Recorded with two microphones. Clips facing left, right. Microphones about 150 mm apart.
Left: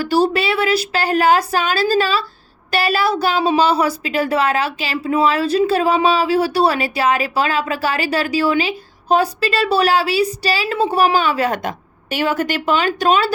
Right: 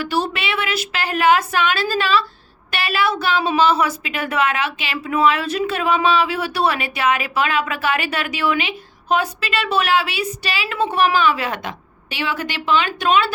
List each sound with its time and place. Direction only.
0.0 s a woman's voice: 35° left (ahead or behind)